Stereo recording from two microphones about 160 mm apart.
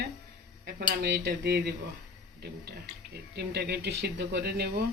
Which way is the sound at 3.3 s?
90° right.